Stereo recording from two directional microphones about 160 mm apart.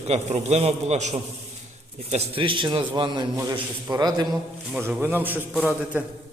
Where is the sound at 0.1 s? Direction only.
45° right (ahead or behind); by 4.4 s 25° right (ahead or behind).